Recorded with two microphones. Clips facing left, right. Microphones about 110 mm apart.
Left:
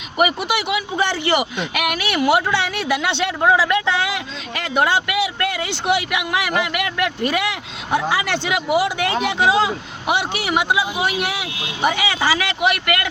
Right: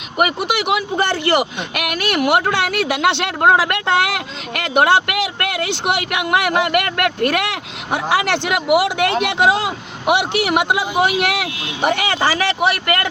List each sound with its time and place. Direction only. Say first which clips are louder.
0.2 s speech: right 1 dB; 60° right (ahead or behind)